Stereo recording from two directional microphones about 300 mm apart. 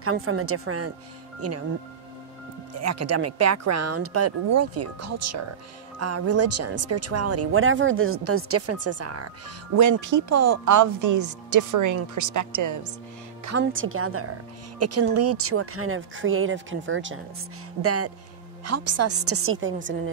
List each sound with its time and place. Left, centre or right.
0.0 s speech: right
2.7 s speech: right
9.8 s speech: right
13.6 s speech: right
17.8 s speech: right